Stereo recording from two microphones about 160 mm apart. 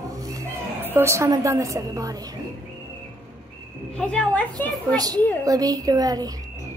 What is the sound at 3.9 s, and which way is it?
Speech, 5° left (ahead or behind).